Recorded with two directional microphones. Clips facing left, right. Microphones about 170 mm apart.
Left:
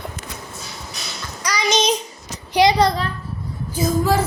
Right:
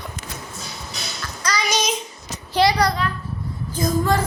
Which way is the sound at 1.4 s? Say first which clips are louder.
Left 2 dB; 15° left (ahead or behind).